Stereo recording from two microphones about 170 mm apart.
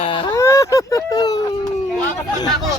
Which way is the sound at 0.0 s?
30° left (ahead or behind).